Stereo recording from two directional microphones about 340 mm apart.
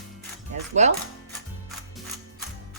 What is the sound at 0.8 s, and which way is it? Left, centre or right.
Speech, centre.